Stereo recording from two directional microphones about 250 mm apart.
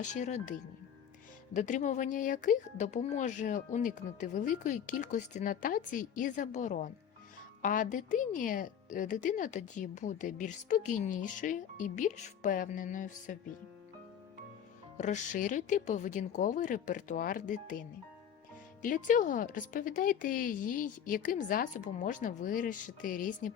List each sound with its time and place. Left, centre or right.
0.1 s speech: left
1.5 s a woman's voice: left
14.9 s a woman's voice: left